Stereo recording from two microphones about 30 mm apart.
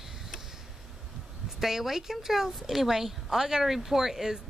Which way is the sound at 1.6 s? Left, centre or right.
Centre.